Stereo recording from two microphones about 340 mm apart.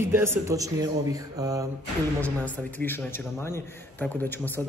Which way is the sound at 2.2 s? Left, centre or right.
Centre.